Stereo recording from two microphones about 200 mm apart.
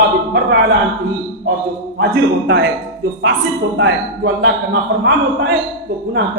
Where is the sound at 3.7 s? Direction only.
65° right (ahead or behind).